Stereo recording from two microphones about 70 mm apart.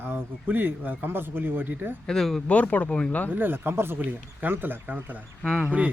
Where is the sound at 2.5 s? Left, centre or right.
Left.